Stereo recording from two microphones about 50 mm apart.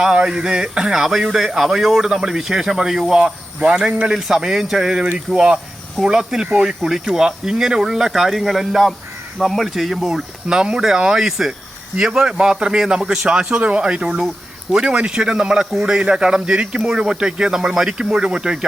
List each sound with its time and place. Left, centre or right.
0.0 s speech: centre
4.1 s speech: centre
10.5 s speech: centre